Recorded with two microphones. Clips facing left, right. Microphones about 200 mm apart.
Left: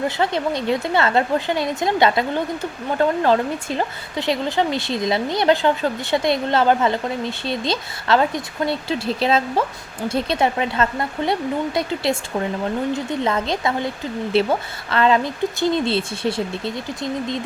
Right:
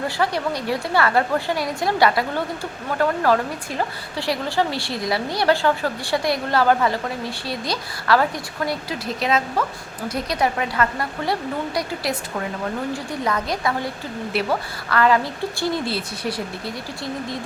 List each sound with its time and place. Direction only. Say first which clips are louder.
0.2 s speech: left 2 dB; 20° left (ahead or behind)